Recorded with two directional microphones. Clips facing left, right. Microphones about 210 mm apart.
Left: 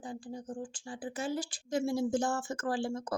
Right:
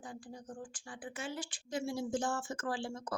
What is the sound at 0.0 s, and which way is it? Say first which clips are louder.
A woman's voice: left 6 dB; 25° left (ahead or behind).